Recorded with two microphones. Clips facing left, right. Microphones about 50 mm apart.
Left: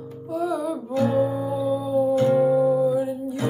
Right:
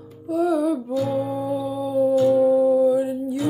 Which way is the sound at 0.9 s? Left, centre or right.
Left.